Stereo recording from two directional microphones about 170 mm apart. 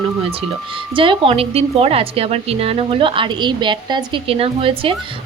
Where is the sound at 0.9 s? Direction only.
30° right (ahead or behind).